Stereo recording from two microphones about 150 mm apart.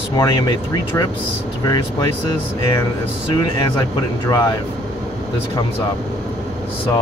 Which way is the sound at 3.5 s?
30° left (ahead or behind).